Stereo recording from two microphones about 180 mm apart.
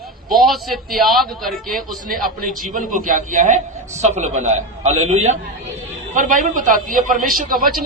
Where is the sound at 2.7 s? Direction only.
45° right (ahead or behind).